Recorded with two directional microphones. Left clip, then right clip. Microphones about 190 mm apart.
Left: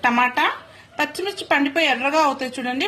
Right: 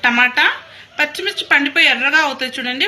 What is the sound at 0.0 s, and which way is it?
A woman's voice, 40° left (ahead or behind).